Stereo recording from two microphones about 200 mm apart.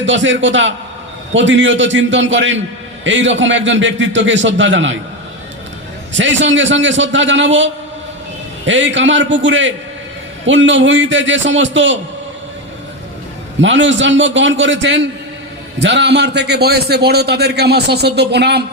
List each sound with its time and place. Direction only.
0.0 s a man's voice: 70° right (ahead or behind)
6.1 s a man's voice: 70° right (ahead or behind)
13.6 s a man's voice: 65° right (ahead or behind)